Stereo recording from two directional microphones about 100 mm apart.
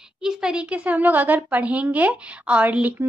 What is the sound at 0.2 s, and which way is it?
A woman's voice, 5° right (ahead or behind).